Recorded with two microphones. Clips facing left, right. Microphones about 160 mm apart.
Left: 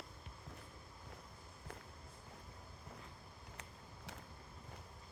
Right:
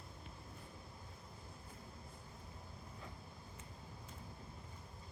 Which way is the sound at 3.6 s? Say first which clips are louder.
Right 1 dB; 75° left (ahead or behind).